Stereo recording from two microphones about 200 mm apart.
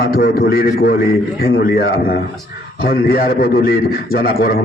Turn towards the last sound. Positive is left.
turn(degrees=50)  # may be behind; listen again after turning